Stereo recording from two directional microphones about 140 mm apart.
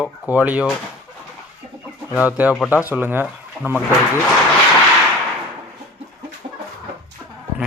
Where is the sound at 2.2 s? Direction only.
10° right (ahead or behind).